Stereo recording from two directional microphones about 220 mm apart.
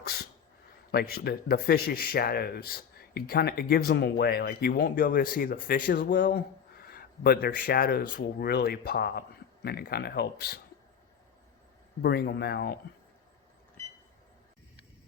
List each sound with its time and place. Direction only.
0.0 s a sound: 45° left (ahead or behind)
0.9 s speech: 45° left (ahead or behind)
12.0 s speech: 45° left (ahead or behind)